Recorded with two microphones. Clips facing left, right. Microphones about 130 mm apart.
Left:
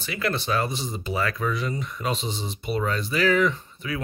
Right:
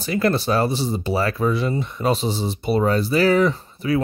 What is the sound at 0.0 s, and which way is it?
Speech, 40° right (ahead or behind).